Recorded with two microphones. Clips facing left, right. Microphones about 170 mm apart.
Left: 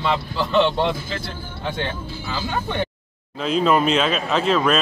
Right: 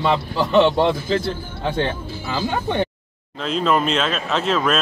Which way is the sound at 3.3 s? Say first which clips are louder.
Left 1 dB; centre (ahead or behind).